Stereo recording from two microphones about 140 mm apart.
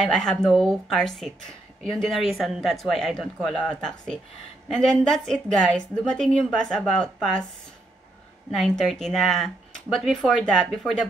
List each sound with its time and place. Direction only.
0.0 s a woman's voice: 5° left (ahead or behind)
8.5 s a woman's voice: centre (ahead or behind)